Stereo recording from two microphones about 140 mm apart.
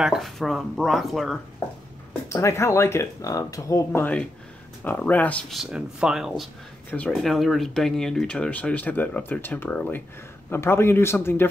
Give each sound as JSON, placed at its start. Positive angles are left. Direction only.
{"t": 0.0, "sound": "speech", "side_deg": 0}
{"t": 2.2, "sound": "speech", "side_deg": 20}
{"t": 5.5, "sound": "speech", "side_deg": -5}